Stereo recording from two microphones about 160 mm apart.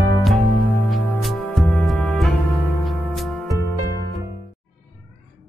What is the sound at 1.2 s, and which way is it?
Music, 5° left (ahead or behind).